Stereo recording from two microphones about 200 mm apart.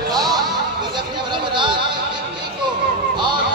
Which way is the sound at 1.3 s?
25° right (ahead or behind).